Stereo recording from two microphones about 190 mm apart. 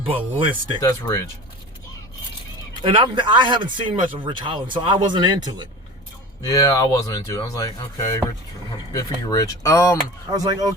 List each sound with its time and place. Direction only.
0.0 s speech: 25° right (ahead or behind)
0.8 s speech: 15° left (ahead or behind)
2.8 s speech: 25° right (ahead or behind)
6.5 s speech: 20° left (ahead or behind)
10.3 s speech: 20° right (ahead or behind)